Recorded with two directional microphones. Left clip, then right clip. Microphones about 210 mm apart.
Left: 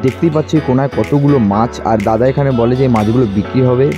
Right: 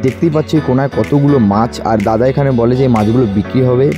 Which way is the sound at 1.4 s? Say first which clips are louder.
Even; 15° right (ahead or behind).